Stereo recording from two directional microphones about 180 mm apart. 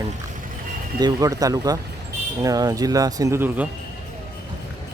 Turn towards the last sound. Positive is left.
turn(degrees=-15)  # may be behind; listen again after turning